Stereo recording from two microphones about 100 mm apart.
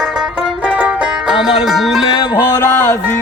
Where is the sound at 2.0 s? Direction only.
55° left (ahead or behind).